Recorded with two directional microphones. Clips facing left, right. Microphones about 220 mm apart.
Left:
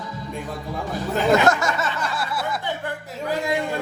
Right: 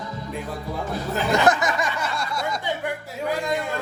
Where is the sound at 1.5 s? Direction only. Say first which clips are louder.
Even; 20° right (ahead or behind).